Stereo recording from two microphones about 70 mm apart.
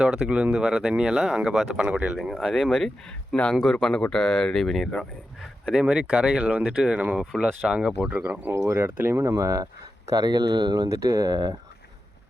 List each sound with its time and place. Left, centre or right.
0.1 s speech: centre
0.6 s speech: centre
3.1 s speech: centre
3.5 s speech: centre
5.7 s speech: centre
8.1 s speech: right
10.1 s speech: right
10.8 s speech: right
11.3 s speech: right